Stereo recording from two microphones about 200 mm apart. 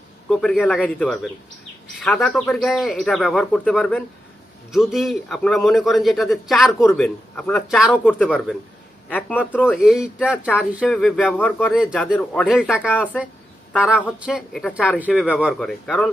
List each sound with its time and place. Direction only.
0.3 s a man's voice: centre (ahead or behind)
11.8 s a man's voice: 5° right (ahead or behind)
14.3 s a man's voice: centre (ahead or behind)